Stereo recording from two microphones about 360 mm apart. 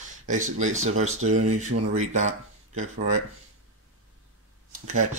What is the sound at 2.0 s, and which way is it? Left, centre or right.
Speech, centre.